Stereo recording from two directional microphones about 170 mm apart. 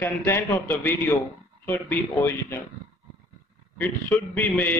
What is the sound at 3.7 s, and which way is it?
Speech, 10° left (ahead or behind).